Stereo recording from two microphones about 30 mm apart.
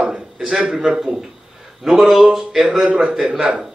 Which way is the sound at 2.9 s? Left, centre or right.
Right.